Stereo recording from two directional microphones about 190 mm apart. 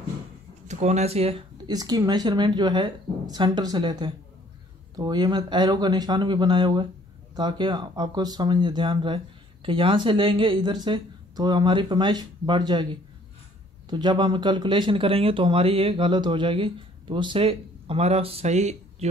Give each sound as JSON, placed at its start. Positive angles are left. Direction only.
{"t": 0.7, "sound": "speech", "side_deg": -35}
{"t": 1.7, "sound": "speech", "side_deg": -20}
{"t": 13.8, "sound": "speech", "side_deg": -25}